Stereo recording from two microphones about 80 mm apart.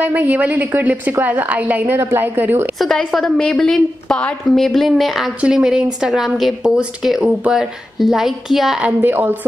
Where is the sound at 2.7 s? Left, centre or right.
Centre.